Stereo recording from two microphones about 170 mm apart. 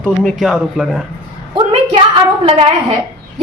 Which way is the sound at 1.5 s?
35° right (ahead or behind).